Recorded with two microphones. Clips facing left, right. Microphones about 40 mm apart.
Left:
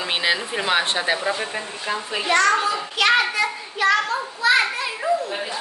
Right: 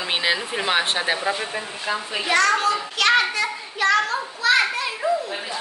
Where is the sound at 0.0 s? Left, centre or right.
Centre.